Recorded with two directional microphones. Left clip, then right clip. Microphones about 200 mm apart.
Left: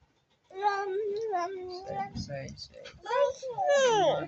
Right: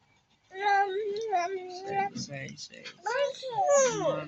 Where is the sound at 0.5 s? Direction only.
40° left (ahead or behind).